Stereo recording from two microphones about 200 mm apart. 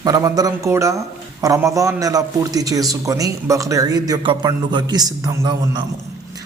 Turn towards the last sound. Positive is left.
turn(degrees=-20)  # may be behind; listen again after turning